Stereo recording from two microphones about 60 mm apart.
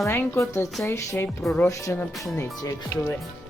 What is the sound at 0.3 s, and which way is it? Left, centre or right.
Speech, left.